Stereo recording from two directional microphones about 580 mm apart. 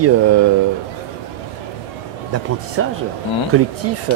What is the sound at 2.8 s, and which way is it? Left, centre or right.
Speech, right.